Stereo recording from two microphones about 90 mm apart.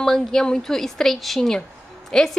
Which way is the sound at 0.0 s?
5° left (ahead or behind).